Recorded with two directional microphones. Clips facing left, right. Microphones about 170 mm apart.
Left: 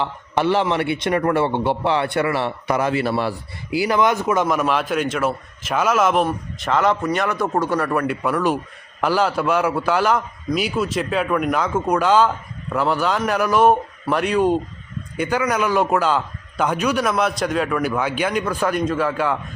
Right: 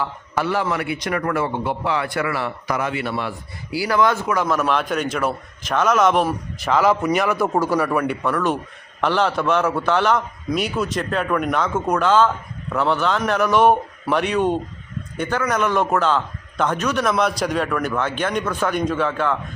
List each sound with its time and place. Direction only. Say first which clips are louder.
0.0 s a man's voice: left 3 dB; 25° left (ahead or behind)
3.7 s a man's voice: left 1 dB; 20° left (ahead or behind)
4.6 s a man's voice: left 1 dB; centre (ahead or behind)